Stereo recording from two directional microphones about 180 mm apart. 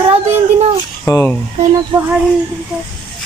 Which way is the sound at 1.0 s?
10° left (ahead or behind).